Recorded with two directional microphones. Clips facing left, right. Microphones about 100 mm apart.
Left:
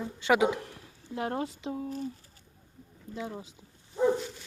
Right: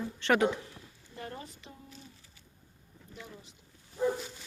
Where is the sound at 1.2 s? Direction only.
85° left.